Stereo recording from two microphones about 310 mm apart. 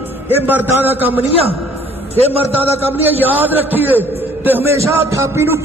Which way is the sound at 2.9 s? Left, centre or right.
Centre.